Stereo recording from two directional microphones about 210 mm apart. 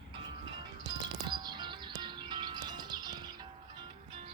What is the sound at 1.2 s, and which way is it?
Music, 20° right (ahead or behind).